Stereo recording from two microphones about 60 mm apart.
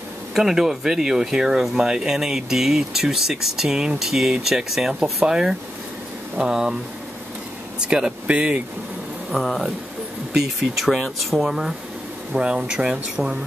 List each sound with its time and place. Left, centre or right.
0.3 s speech: centre
7.8 s speech: centre
9.3 s speech: centre